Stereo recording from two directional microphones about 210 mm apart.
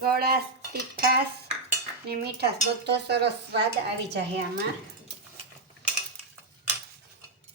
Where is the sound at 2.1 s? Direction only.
50° right (ahead or behind).